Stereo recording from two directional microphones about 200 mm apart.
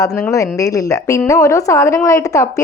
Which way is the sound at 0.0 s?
15° left (ahead or behind).